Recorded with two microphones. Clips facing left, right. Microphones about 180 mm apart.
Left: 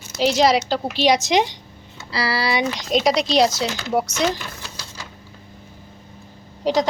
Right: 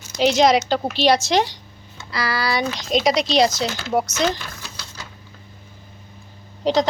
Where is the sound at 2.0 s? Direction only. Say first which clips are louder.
Left 1 dB; 30° left (ahead or behind).